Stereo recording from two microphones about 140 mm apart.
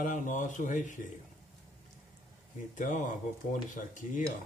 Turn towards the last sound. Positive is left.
turn(degrees=65)  # may be behind; listen again after turning